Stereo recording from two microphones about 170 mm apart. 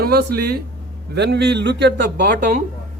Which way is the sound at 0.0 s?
70° right (ahead or behind).